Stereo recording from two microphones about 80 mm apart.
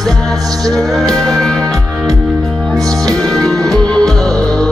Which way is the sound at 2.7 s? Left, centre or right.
Right.